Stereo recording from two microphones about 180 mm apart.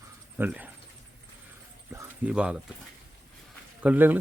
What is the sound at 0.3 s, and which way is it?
Speech, 10° right (ahead or behind).